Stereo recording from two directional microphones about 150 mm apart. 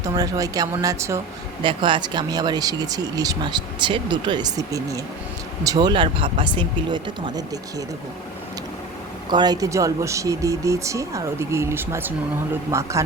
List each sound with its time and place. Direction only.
0.0 s speech: 20° right (ahead or behind)
1.6 s speech: 35° right (ahead or behind)
9.3 s speech: 30° right (ahead or behind)